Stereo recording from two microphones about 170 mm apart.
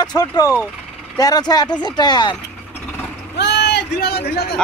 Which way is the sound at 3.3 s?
85° left.